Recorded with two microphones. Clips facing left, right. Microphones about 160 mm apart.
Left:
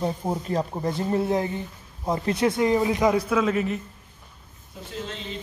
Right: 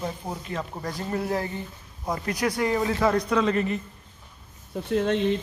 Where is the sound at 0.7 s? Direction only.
25° left (ahead or behind); by 3.8 s 5° left (ahead or behind).